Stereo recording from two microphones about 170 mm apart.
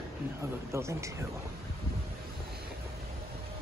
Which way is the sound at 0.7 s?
15° right (ahead or behind).